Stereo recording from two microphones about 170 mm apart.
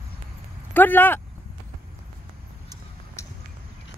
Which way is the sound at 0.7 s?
10° left (ahead or behind).